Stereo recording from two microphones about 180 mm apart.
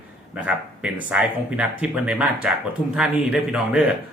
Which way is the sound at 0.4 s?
5° right (ahead or behind).